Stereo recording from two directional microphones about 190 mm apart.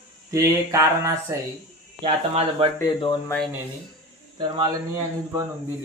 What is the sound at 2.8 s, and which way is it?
Speech, 20° left (ahead or behind).